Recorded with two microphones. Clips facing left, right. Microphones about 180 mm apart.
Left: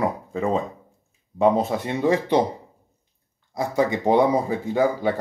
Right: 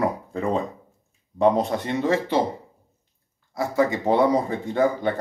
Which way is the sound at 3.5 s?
15° left (ahead or behind).